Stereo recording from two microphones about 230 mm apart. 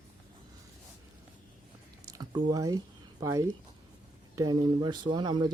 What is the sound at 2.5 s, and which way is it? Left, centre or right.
Speech, centre.